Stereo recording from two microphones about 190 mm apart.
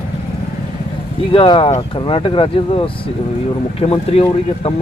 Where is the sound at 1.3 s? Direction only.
30° left (ahead or behind).